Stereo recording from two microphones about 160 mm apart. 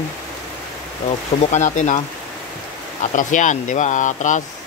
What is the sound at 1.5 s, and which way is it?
Speech, 50° left (ahead or behind).